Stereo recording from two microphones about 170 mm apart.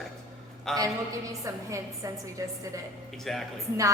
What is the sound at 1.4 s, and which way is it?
A woman's voice, 20° right (ahead or behind).